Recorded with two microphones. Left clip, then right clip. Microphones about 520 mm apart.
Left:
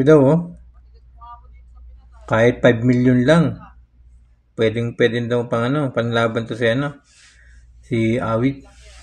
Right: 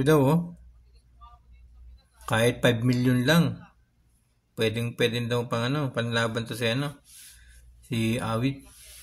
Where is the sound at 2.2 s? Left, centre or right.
Right.